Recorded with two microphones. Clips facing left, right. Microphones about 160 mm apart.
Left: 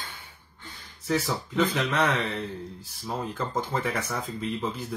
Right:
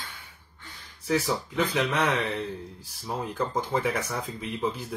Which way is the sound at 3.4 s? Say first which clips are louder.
Right 4 dB; 10° right (ahead or behind).